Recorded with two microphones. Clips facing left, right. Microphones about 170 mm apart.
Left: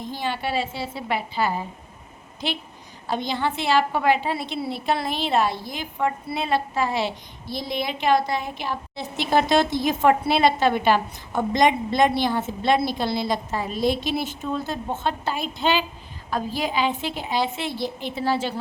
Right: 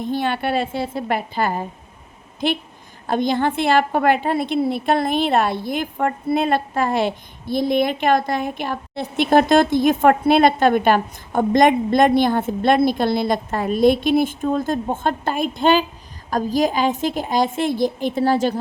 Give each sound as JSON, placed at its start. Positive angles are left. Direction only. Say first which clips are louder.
{"t": 0.0, "sound": "a woman's voice", "louder": "right 6 dB", "side_deg": -60}